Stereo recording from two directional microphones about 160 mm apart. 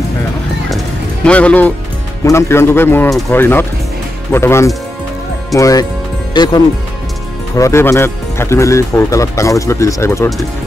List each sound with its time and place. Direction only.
1.2 s a man's voice: 10° left (ahead or behind)